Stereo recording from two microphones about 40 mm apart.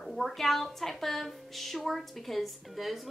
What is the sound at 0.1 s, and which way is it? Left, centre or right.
A woman's voice, centre.